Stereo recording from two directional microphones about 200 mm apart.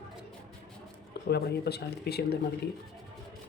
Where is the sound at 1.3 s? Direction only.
55° left (ahead or behind).